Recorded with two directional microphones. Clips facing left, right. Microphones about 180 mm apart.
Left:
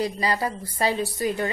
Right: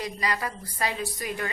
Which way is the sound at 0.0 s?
30° left (ahead or behind).